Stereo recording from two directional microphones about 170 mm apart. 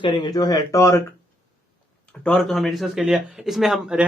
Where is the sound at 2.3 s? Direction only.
Centre (ahead or behind).